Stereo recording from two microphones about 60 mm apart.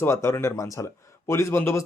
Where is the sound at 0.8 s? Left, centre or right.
Left.